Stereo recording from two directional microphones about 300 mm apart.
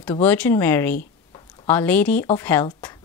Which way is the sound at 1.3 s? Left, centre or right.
Centre.